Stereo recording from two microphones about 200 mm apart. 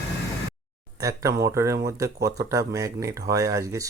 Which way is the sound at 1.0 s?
15° right (ahead or behind).